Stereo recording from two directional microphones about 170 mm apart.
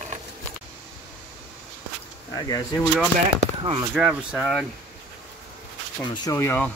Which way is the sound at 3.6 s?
30° right (ahead or behind).